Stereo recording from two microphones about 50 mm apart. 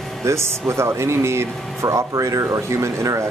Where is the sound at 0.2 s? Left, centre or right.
Right.